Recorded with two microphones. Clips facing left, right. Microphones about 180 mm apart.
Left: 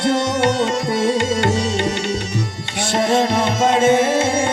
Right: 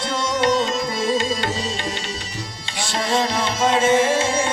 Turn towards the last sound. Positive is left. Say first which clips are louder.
# left 3 dB
turn(degrees=55)  # may be behind; listen again after turning